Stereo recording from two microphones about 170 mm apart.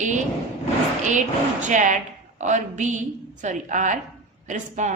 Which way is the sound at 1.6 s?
45° right (ahead or behind).